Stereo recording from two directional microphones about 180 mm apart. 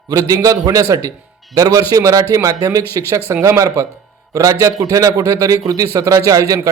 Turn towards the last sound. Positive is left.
turn(degrees=-20)  # may be behind; listen again after turning